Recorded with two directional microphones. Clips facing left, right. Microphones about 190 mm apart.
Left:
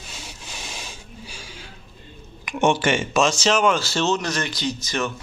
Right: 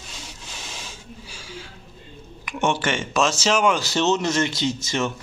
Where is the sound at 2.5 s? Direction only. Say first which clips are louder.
Left 3 dB; 15° left (ahead or behind); by 5.1 s 25° right (ahead or behind).